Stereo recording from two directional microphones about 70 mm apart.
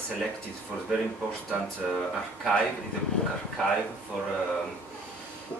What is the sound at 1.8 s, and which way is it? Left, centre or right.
Speech, centre.